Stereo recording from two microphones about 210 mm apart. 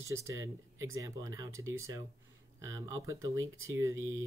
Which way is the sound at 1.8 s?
15° right (ahead or behind).